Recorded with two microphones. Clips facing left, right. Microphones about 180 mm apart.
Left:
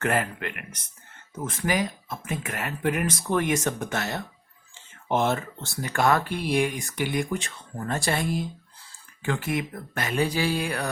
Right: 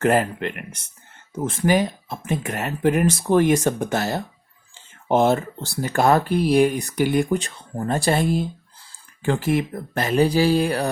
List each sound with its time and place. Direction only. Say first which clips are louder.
0.0 s speech: right 7 dB; 35° right (ahead or behind)